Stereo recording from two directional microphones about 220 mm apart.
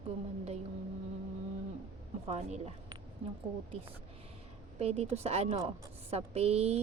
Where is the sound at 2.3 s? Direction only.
30° right (ahead or behind).